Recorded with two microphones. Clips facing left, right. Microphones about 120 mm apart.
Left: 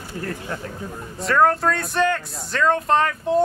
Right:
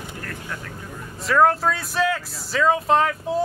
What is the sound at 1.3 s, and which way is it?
Speech, centre (ahead or behind).